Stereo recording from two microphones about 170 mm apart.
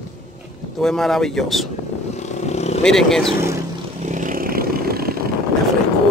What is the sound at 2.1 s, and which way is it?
Vehicle, 40° left (ahead or behind).